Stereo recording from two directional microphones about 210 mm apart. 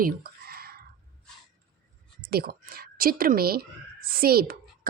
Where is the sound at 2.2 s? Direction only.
45° right (ahead or behind).